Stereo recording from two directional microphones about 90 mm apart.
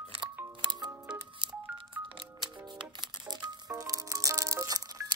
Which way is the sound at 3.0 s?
50° right (ahead or behind).